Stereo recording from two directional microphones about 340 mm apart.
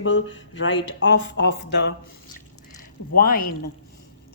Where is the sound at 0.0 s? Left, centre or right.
Left.